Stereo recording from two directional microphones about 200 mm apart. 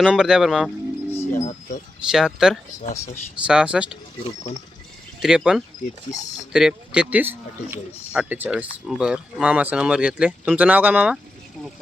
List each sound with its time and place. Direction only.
0.0 s speech: 5° right (ahead or behind)
1.3 s speech: 35° left (ahead or behind)
2.0 s speech: 5° right (ahead or behind)
5.2 s speech: 5° right (ahead or behind)